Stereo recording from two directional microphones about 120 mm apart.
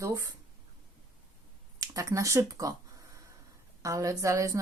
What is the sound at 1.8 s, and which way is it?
Speech, 30° right (ahead or behind).